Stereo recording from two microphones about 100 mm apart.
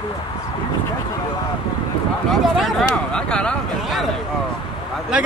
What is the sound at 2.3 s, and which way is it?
Speech, 5° left (ahead or behind).